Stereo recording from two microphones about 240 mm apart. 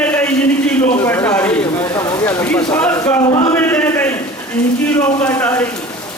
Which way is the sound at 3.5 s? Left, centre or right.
Centre.